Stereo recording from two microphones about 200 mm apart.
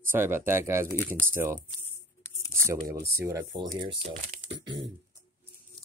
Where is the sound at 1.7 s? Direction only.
10° left (ahead or behind).